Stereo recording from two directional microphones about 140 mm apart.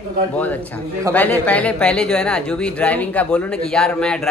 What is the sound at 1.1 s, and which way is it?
Speech, 10° left (ahead or behind).